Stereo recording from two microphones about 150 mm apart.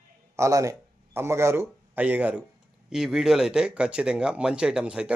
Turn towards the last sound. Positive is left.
turn(degrees=-5)  # may be behind; listen again after turning